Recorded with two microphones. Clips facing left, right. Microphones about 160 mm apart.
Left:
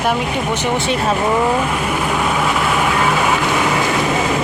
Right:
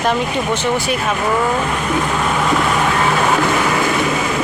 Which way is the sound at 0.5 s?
25° left (ahead or behind).